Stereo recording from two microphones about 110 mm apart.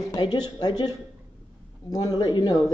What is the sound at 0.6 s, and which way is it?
A woman's voice, 40° left (ahead or behind).